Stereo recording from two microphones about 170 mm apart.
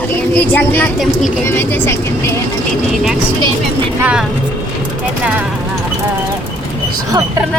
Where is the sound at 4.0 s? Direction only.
10° right (ahead or behind).